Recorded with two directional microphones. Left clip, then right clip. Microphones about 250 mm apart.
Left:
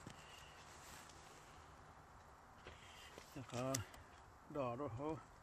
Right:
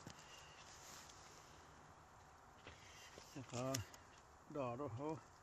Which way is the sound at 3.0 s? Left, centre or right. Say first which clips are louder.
Left 1 dB; centre.